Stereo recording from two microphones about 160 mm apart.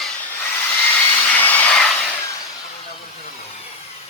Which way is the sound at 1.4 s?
10° left (ahead or behind).